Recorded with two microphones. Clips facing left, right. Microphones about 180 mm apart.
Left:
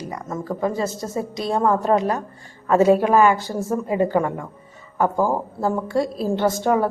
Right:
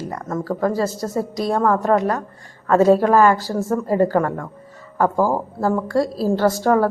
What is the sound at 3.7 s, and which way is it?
Speech, 15° left (ahead or behind).